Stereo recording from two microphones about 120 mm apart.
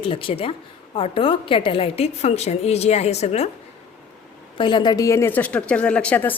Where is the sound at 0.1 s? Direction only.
50° left (ahead or behind).